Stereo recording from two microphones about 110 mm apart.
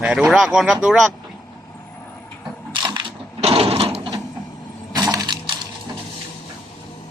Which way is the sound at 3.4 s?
65° right (ahead or behind).